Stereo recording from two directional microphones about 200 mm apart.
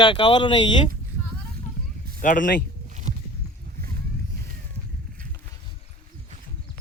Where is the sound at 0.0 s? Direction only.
25° left (ahead or behind).